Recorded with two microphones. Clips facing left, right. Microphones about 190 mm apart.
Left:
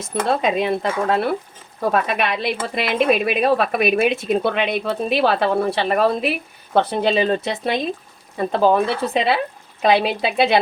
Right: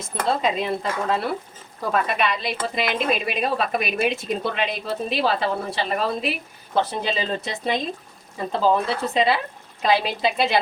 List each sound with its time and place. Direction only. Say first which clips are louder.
0.6 s speech: left 5 dB; 60° left (ahead or behind)